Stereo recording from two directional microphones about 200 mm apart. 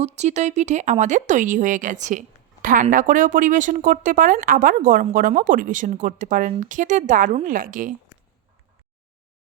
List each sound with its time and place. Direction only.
0.0 s speech: 35° right (ahead or behind)